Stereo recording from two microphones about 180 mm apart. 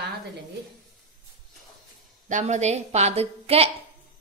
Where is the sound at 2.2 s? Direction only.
40° right (ahead or behind).